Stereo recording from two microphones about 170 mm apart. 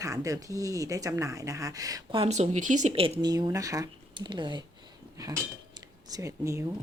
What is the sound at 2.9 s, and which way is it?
Speech, 30° right (ahead or behind).